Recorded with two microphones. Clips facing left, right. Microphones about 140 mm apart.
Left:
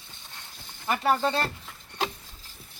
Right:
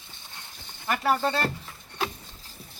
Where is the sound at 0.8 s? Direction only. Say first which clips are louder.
Even; 15° left (ahead or behind).